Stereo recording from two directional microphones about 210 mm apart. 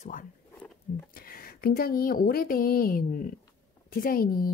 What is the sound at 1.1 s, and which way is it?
Speech, 45° left (ahead or behind).